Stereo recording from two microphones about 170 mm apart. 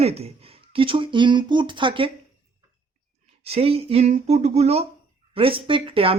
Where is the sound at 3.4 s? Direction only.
35° right (ahead or behind).